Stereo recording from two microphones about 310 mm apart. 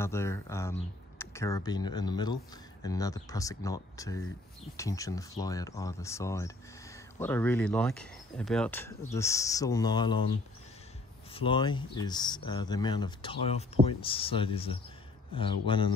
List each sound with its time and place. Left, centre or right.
0.0 s speech: centre
11.3 s speech: centre